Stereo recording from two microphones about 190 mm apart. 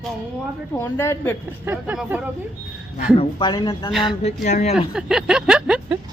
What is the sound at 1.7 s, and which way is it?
Speech, 5° right (ahead or behind).